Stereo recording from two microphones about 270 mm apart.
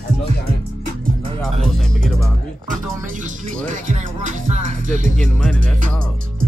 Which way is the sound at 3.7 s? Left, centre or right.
Right.